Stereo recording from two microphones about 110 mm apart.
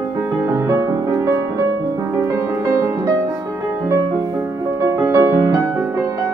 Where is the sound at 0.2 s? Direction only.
25° right (ahead or behind).